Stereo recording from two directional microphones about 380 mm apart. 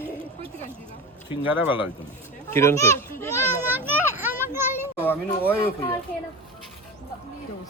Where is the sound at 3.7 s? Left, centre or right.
Centre.